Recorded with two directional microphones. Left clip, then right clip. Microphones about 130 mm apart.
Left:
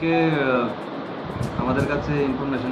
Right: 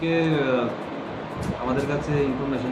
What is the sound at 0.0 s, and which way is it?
Speech, 20° right (ahead or behind).